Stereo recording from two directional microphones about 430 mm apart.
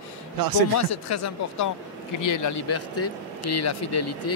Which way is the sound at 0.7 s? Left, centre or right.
Left.